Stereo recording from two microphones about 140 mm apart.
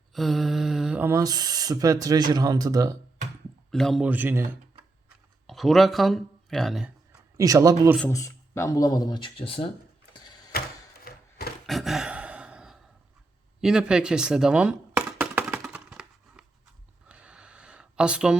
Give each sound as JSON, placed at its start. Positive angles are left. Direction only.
{"t": 0.1, "sound": "mantra", "side_deg": 0}
{"t": 1.0, "sound": "speech", "side_deg": -25}
{"t": 3.7, "sound": "speech", "side_deg": 0}
{"t": 4.0, "sound": "speech", "side_deg": -15}
{"t": 5.0, "sound": "a sound", "side_deg": 0}
{"t": 7.3, "sound": "speech", "side_deg": -25}
{"t": 8.1, "sound": "speech", "side_deg": 20}
{"t": 11.0, "sound": "a sound", "side_deg": 90}
{"t": 11.6, "sound": "a sound", "side_deg": 0}